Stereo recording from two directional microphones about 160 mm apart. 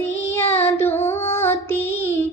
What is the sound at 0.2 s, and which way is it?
Child singing, 15° left (ahead or behind).